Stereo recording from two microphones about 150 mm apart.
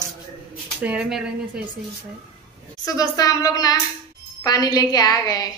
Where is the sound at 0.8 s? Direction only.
5° right (ahead or behind).